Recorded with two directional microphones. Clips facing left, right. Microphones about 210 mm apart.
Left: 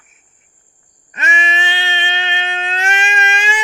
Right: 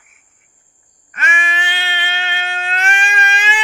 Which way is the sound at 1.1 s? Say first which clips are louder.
Left 2 dB; 20° left (ahead or behind).